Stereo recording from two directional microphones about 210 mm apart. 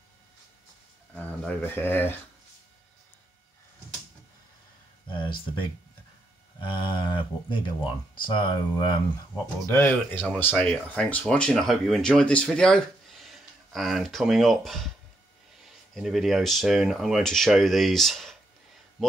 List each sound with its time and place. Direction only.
1.1 s speech: 5° left (ahead or behind)
5.0 s speech: 25° left (ahead or behind)
9.7 s speech: 10° left (ahead or behind)